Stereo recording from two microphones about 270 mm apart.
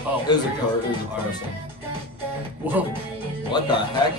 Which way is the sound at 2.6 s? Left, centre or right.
Centre.